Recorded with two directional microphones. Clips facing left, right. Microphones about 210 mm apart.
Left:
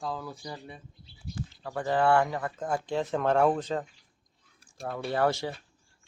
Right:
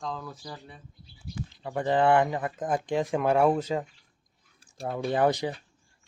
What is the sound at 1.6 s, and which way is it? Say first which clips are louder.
Speech: right 2 dB; 20° right (ahead or behind).